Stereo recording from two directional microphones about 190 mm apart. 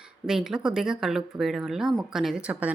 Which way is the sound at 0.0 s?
5° right (ahead or behind).